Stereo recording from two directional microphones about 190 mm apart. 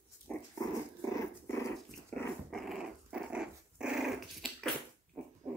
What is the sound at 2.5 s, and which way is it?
Dog, centre (ahead or behind).